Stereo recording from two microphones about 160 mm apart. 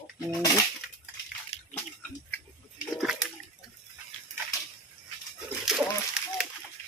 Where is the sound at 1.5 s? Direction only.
40° left (ahead or behind).